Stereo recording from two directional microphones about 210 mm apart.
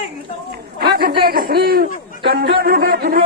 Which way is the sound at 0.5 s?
45° right (ahead or behind).